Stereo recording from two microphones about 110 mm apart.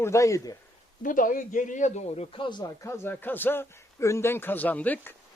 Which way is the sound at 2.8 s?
25° left (ahead or behind).